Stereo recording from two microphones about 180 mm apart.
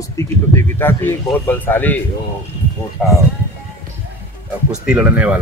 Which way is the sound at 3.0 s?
5° left (ahead or behind).